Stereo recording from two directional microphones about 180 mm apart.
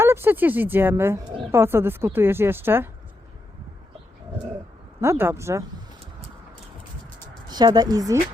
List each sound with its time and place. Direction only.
0.0 s a woman's voice: 10° right (ahead or behind)
4.9 s a woman's voice: 15° right (ahead or behind)
7.4 s a woman's voice: 20° right (ahead or behind)